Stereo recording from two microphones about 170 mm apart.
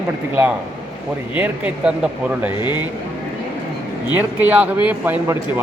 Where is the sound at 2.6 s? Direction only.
25° left (ahead or behind).